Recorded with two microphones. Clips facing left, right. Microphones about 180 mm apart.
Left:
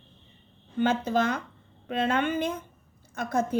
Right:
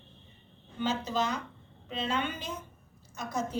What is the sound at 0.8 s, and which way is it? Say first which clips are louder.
A woman's voice: left 6 dB; 55° left (ahead or behind).